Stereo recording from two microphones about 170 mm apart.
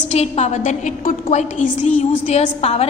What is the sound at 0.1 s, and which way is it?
A woman's voice, 40° left (ahead or behind).